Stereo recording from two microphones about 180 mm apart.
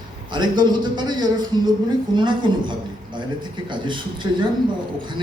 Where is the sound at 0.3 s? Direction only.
25° right (ahead or behind).